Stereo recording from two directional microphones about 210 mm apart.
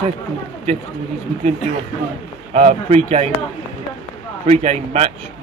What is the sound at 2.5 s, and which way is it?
Speech, 30° right (ahead or behind).